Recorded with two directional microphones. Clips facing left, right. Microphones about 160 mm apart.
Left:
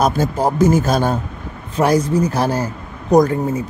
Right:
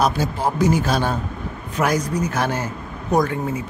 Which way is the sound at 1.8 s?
30° left (ahead or behind).